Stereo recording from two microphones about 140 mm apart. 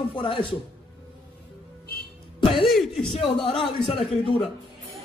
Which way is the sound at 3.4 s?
40° left (ahead or behind).